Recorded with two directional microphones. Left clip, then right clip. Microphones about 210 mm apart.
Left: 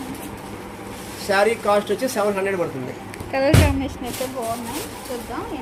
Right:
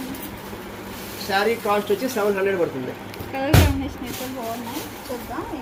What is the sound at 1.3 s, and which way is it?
Speech, 40° left (ahead or behind).